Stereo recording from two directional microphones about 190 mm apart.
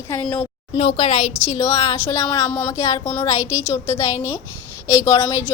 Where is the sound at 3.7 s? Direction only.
15° left (ahead or behind).